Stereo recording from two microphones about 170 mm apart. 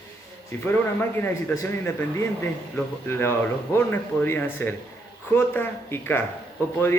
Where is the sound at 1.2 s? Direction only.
15° left (ahead or behind).